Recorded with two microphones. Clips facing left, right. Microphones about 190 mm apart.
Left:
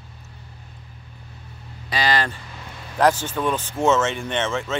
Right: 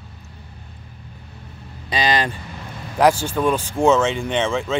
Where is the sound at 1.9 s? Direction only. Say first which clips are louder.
Right 2 dB; 20° right (ahead or behind).